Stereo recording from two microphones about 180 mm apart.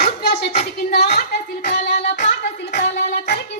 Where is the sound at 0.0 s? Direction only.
65° left (ahead or behind).